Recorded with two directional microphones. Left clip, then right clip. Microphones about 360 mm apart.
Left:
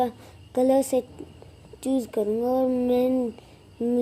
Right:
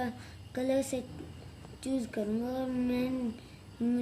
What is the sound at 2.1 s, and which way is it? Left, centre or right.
Speech, centre.